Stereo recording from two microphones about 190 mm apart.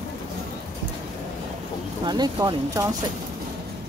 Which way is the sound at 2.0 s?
20° right (ahead or behind).